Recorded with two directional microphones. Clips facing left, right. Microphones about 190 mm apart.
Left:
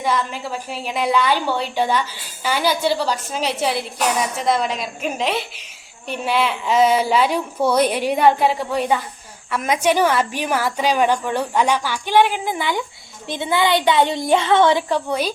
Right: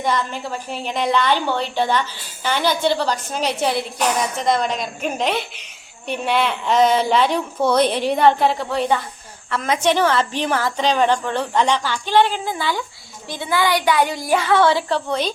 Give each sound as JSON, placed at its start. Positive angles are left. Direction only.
{"t": 0.0, "sound": "a woman's voice", "side_deg": 5}